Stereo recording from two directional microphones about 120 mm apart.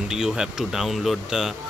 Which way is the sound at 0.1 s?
5° right (ahead or behind).